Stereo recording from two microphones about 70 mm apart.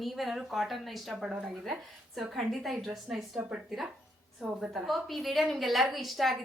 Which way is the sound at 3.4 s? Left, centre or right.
Centre.